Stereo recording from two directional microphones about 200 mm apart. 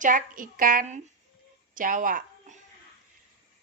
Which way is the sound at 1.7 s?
40° right (ahead or behind).